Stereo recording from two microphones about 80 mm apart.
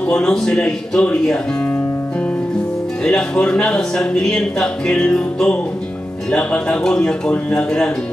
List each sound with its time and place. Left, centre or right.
0.0 s speech: centre
3.0 s speech: centre